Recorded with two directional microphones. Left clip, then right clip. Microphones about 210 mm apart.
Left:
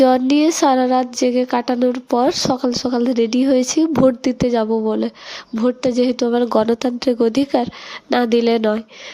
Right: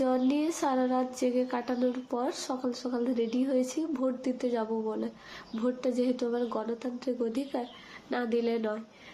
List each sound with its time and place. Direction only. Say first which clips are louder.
0.0 s speech: left 15 dB; 45° left (ahead or behind)